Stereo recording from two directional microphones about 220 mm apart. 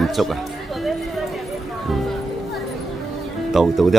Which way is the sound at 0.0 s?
Centre (ahead or behind).